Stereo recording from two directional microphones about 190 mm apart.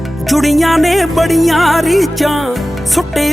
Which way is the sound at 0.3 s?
Centre (ahead or behind).